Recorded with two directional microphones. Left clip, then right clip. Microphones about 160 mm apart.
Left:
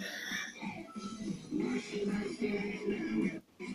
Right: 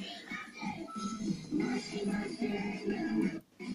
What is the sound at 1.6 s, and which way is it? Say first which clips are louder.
Music: left 2 dB; 5° left (ahead or behind).